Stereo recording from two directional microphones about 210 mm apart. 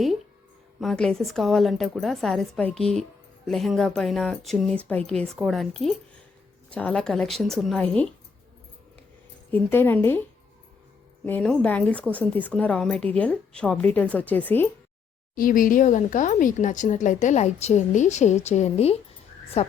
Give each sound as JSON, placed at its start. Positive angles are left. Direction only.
{"t": 0.8, "sound": "speech", "side_deg": 0}
{"t": 9.5, "sound": "a woman's voice", "side_deg": 10}
{"t": 11.3, "sound": "a woman's voice", "side_deg": 5}
{"t": 15.4, "sound": "speech", "side_deg": 40}